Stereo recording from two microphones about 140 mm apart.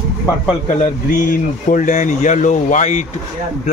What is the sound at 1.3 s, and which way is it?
Speech, 70° left (ahead or behind).